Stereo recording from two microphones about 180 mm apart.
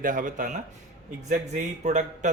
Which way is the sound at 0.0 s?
50° right (ahead or behind).